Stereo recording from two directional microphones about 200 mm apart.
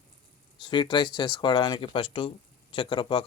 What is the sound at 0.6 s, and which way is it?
Speech, 25° left (ahead or behind).